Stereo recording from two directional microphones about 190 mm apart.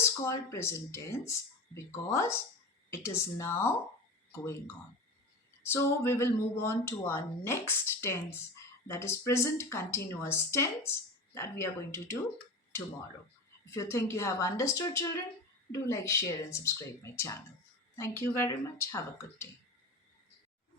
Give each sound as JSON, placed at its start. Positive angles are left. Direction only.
{"t": 0.0, "sound": "speech", "side_deg": 15}
{"t": 13.7, "sound": "speech", "side_deg": 15}